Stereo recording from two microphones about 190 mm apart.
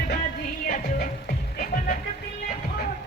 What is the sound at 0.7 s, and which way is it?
Music, 45° left (ahead or behind).